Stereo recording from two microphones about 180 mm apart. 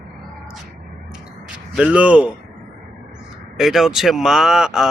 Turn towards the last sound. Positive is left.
turn(degrees=0)  # may be behind; listen again after turning